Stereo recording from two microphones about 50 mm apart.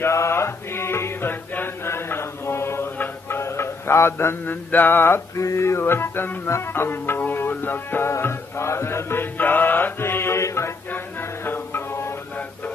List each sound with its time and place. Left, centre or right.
0.0 s music: left
1.3 s chant: left
1.9 s mantra: left
3.3 s music: left
4.6 s music: left
5.3 s music: left
8.2 s music: left
9.9 s music: left
10.4 s music: left
10.9 s music: left